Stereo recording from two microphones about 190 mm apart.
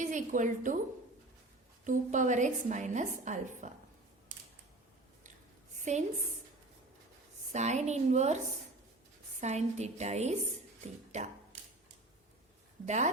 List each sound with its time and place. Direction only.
0.0 s a woman's voice: 40° right (ahead or behind)
1.8 s a woman's voice: 40° right (ahead or behind)
5.7 s a sound: 40° right (ahead or behind)
7.5 s a woman's voice: 35° right (ahead or behind)
9.4 s a woman's voice: 35° right (ahead or behind)
12.8 s a woman's voice: 40° right (ahead or behind)